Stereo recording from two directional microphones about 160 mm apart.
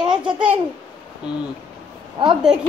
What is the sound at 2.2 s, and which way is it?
Speech, 35° right (ahead or behind).